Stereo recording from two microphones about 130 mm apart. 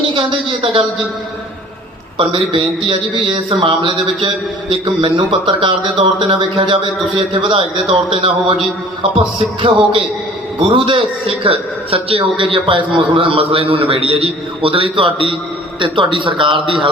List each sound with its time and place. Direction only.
0.1 s a man's voice: 40° right (ahead or behind)
2.1 s a man's voice: 45° right (ahead or behind)